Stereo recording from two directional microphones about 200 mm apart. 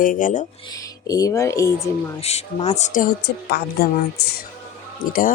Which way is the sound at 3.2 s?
55° left (ahead or behind).